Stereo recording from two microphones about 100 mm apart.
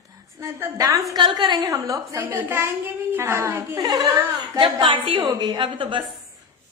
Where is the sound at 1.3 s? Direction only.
45° right (ahead or behind).